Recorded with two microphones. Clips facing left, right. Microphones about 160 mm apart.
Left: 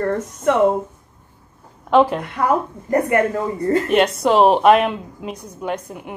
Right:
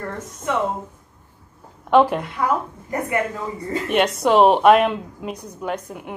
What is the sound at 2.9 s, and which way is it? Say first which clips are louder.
Speech: left 7 dB; 60° left (ahead or behind).